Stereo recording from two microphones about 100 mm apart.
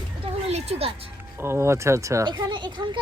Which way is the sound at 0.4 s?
90° right.